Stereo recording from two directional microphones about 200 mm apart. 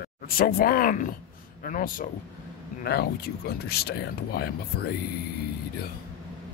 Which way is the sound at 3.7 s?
50° left (ahead or behind).